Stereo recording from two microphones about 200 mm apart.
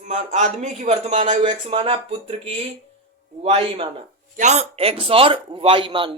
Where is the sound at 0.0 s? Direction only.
35° right (ahead or behind).